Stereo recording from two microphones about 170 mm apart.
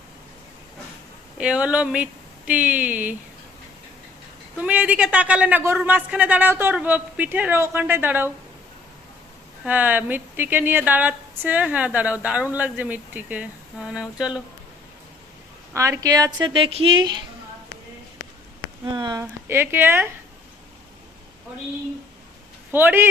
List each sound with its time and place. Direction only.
1.4 s speech: 5° right (ahead or behind)
4.5 s speech: 5° right (ahead or behind)
9.6 s speech: 10° right (ahead or behind)
15.7 s a woman's voice: 15° right (ahead or behind)
18.9 s speech: 25° right (ahead or behind)
22.7 s speech: 10° right (ahead or behind)